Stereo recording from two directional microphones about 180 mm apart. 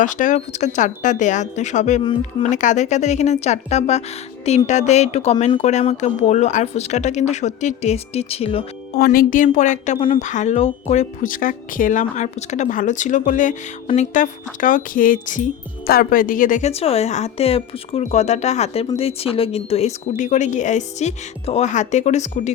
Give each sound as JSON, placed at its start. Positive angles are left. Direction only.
{"t": 0.0, "sound": "speech", "side_deg": 45}
{"t": 9.0, "sound": "speech", "side_deg": 50}